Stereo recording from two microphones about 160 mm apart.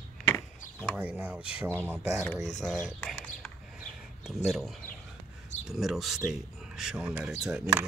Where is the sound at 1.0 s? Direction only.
10° right (ahead or behind).